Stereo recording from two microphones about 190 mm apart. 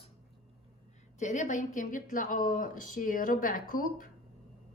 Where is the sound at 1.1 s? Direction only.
40° left (ahead or behind).